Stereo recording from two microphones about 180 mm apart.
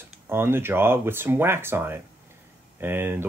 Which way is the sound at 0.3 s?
15° right (ahead or behind).